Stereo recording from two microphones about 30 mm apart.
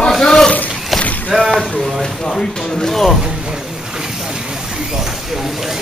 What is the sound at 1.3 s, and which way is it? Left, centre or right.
Speech, right.